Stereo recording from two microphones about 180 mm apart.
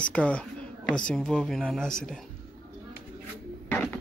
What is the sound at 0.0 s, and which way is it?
A woman's voice, 5° left (ahead or behind).